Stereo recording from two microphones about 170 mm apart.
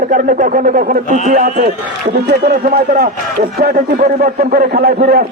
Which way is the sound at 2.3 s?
70° right (ahead or behind).